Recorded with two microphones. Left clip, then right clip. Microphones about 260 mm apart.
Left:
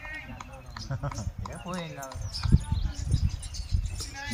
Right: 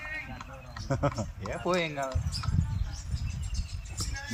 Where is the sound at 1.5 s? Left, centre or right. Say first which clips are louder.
Right 9 dB; right.